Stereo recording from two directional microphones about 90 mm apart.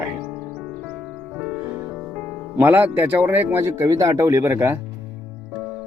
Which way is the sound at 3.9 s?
40° right (ahead or behind).